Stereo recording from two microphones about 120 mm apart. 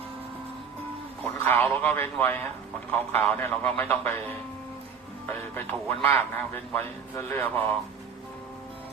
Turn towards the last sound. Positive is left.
turn(degrees=15)  # may be behind; listen again after turning